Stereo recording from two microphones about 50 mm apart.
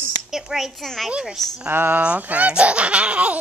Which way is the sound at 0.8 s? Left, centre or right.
Centre.